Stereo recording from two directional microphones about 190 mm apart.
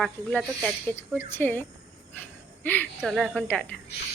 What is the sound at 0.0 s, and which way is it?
Speech, 5° left (ahead or behind).